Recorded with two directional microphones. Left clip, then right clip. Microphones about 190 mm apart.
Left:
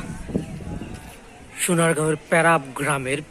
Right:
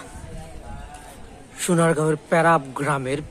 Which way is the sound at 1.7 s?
5° right (ahead or behind).